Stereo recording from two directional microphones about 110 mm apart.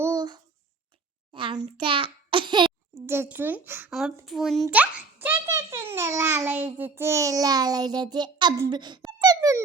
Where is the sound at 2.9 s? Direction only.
20° right (ahead or behind).